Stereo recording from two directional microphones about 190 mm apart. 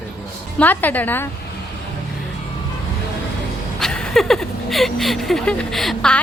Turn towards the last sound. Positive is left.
turn(degrees=0)  # may be behind; listen again after turning